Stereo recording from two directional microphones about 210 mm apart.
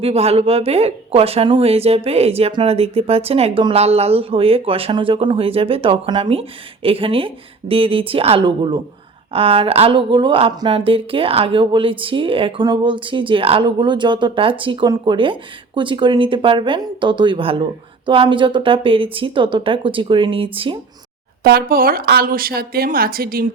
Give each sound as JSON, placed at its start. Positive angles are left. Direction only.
{"t": 0.0, "sound": "speech", "side_deg": -30}
{"t": 21.4, "sound": "speech", "side_deg": -45}